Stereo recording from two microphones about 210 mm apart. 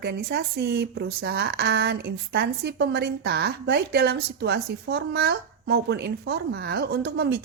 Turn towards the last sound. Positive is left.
turn(degrees=-50)  # may be behind; listen again after turning